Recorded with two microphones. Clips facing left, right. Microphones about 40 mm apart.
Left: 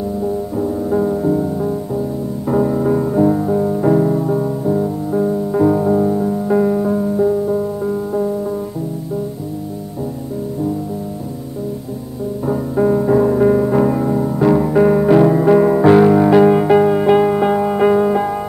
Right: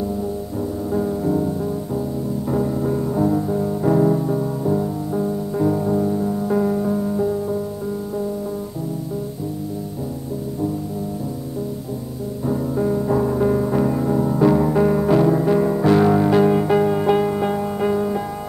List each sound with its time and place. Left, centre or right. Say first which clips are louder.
0.6 s music: left 5 dB; centre
12.4 s music: left 5 dB; left